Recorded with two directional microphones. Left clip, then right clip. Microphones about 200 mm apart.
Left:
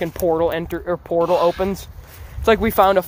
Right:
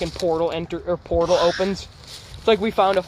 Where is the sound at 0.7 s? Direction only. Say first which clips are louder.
Left 1 dB; 15° left (ahead or behind).